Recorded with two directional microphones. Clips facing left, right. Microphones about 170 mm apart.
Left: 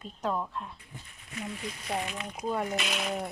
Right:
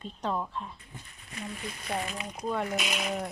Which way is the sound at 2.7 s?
Centre (ahead or behind).